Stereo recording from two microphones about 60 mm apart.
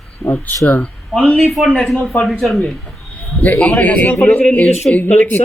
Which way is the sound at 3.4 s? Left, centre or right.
Left.